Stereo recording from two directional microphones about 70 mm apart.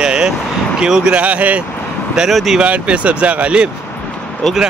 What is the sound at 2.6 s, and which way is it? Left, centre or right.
Speech, centre.